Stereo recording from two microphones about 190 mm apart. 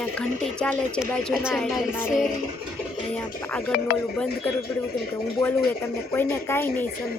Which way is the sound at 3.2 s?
10° left (ahead or behind).